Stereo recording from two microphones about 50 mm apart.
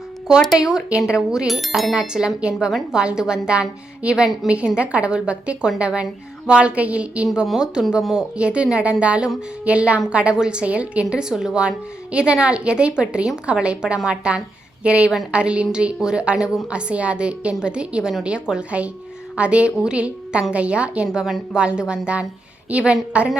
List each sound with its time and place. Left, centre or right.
0.6 s a woman's voice: centre
1.5 s bicycle bell: centre
2.0 s a woman's voice: centre
7.6 s a woman's voice: centre
11.1 s a woman's voice: centre